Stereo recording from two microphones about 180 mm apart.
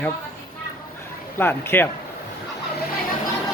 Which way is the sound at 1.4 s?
10° left (ahead or behind).